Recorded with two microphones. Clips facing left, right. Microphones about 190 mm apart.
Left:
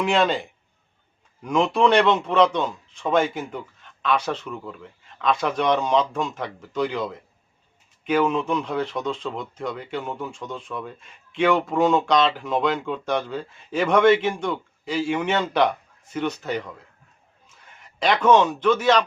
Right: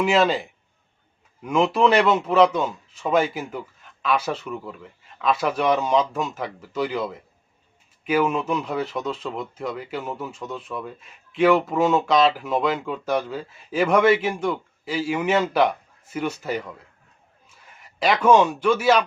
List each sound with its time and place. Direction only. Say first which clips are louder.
0.0 s a man's voice: right 2 dB; centre (ahead or behind)